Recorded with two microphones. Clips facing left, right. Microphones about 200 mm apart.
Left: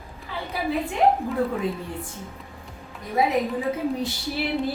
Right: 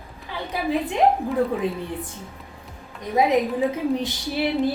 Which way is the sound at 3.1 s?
20° right (ahead or behind).